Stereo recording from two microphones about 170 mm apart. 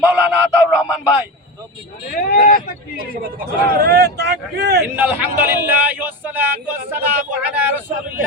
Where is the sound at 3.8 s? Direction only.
75° right (ahead or behind).